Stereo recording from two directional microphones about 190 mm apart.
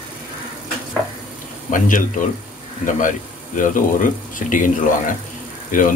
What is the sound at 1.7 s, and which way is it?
Speech, 45° left (ahead or behind).